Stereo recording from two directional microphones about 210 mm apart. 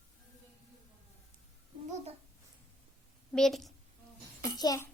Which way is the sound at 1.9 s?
35° right (ahead or behind).